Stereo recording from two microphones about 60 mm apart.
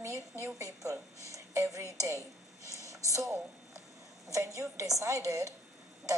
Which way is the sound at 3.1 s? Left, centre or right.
Right.